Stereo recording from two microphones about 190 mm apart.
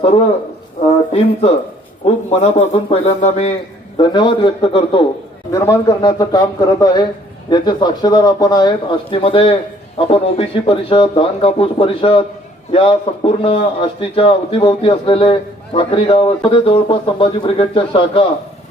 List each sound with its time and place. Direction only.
2.0 s a man's voice: 35° left (ahead or behind)